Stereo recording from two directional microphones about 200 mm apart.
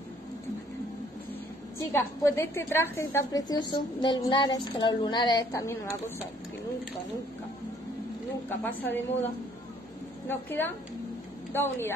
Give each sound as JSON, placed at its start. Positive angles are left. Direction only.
{"t": 1.9, "sound": "a woman's voice", "side_deg": 10}
{"t": 8.5, "sound": "a woman's voice", "side_deg": 10}
{"t": 10.2, "sound": "a woman's voice", "side_deg": 10}